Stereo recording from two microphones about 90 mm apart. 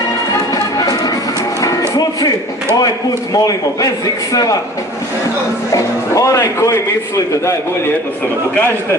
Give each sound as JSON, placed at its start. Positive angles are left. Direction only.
{"t": 0.3, "sound": "music", "side_deg": 45}
{"t": 3.3, "sound": "a man's voice", "side_deg": 40}
{"t": 5.7, "sound": "a man's voice", "side_deg": 35}
{"t": 8.5, "sound": "a man's voice", "side_deg": 25}